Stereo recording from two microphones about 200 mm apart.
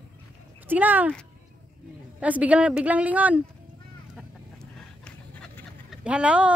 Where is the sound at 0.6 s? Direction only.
10° right (ahead or behind).